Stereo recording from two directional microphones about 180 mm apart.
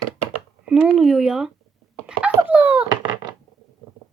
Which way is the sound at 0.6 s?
5° right (ahead or behind).